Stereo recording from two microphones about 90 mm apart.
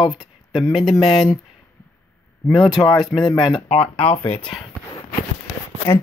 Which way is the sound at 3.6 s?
90° left.